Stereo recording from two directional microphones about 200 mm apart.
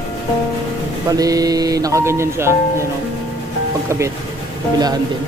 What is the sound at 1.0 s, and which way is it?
Speech, 15° right (ahead or behind).